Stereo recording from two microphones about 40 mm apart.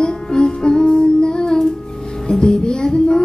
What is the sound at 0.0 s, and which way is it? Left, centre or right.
Music, centre.